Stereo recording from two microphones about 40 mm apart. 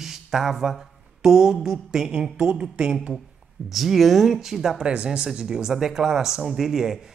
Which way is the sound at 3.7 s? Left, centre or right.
Centre.